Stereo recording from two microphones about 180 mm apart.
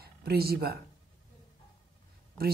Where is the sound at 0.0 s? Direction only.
60° right (ahead or behind).